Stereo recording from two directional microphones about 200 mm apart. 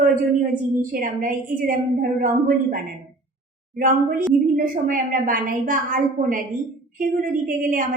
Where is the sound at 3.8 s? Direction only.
40° right (ahead or behind).